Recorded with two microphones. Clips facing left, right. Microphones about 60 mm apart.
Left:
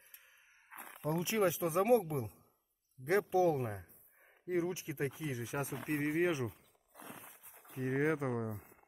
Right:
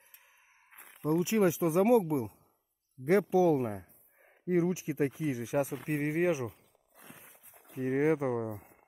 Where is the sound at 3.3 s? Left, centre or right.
Centre; by 6.1 s right.